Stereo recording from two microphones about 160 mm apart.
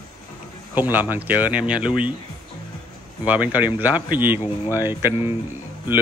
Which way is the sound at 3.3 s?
10° right (ahead or behind).